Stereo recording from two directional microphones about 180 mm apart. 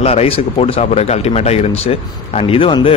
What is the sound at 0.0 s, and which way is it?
Speech, 35° left (ahead or behind).